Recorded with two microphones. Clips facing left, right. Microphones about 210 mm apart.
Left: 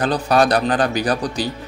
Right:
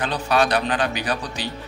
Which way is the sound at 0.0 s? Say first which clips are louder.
Left 5 dB; 40° left (ahead or behind).